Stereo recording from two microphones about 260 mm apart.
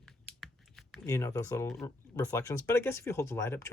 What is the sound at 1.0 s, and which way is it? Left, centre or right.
Speech, centre.